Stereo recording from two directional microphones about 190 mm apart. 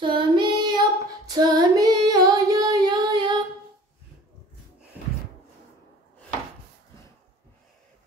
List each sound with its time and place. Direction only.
0.0 s female singing: 25° right (ahead or behind)